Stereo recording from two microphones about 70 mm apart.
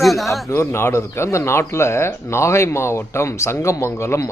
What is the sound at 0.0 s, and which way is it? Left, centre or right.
Speech, centre.